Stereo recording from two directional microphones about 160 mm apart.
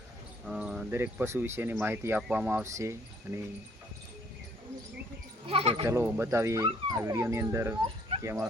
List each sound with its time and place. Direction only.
0.4 s cricket: 5° right (ahead or behind)
0.9 s speech: 15° right (ahead or behind)
5.5 s speech: 35° right (ahead or behind)
5.8 s speech: 15° right (ahead or behind)